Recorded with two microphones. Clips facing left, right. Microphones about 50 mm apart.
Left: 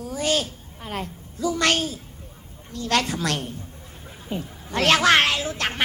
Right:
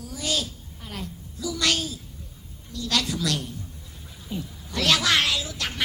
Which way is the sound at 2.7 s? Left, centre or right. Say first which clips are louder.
Left 4 dB; left.